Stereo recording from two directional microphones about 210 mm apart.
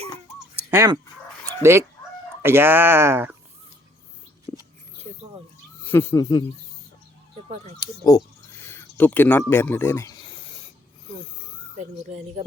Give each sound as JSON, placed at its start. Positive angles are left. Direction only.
{"t": 0.5, "sound": "a sound", "side_deg": -10}
{"t": 1.5, "sound": "dog", "side_deg": -10}
{"t": 2.4, "sound": "speech", "side_deg": -10}
{"t": 4.5, "sound": "whispering", "side_deg": 10}
{"t": 5.8, "sound": "speech", "side_deg": 10}
{"t": 7.8, "sound": "speech", "side_deg": 15}